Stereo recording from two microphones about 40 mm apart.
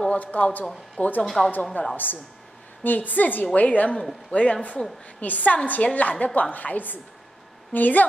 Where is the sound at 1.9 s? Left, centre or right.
Left.